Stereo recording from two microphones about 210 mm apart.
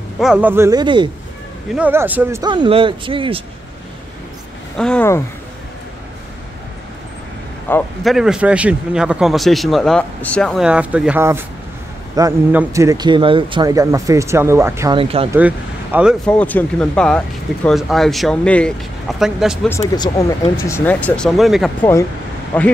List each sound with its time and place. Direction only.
0.2 s a man's voice: 5° right (ahead or behind); by 1.1 s 20° right (ahead or behind)
1.7 s speech: 10° right (ahead or behind); by 3.4 s 25° right (ahead or behind)
4.7 s speech: 5° left (ahead or behind)
7.7 s speech: 10° left (ahead or behind)
8.0 s a man's voice: centre (ahead or behind)
15.0 s speech: 25° right (ahead or behind)
15.3 s speech: 5° right (ahead or behind)
19.7 s speech: 15° left (ahead or behind)